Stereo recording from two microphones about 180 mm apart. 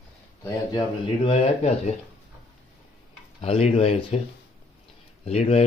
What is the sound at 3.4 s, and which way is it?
Speech, 35° left (ahead or behind).